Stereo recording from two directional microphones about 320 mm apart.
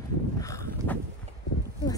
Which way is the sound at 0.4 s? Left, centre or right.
Centre.